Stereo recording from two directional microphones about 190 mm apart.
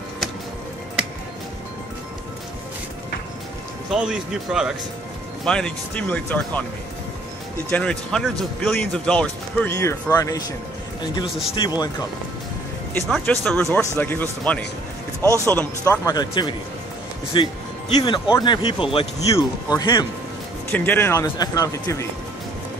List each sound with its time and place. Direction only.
1.0 s music: 5° right (ahead or behind)
3.9 s speech: 5° right (ahead or behind)
7.7 s speech: 5° left (ahead or behind)
11.2 s speech: centre (ahead or behind)
11.5 s speech: 25° left (ahead or behind)
13.1 s speech: 5° left (ahead or behind)
15.2 s speech: 15° right (ahead or behind)
15.5 s speech: 10° left (ahead or behind)
20.7 s speech: 10° left (ahead or behind)